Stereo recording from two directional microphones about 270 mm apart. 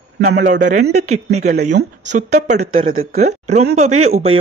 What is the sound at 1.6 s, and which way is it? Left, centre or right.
Speech, right.